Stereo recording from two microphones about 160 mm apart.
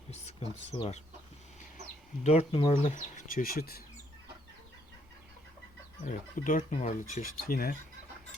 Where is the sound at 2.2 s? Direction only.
40° left (ahead or behind).